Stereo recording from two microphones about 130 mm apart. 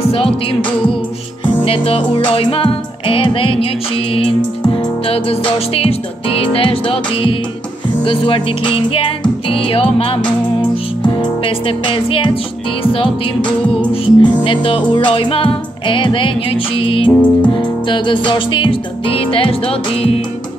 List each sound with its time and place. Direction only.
0.0 s music: 45° left (ahead or behind)
17.1 s music: 10° left (ahead or behind)
17.6 s music: 40° left (ahead or behind)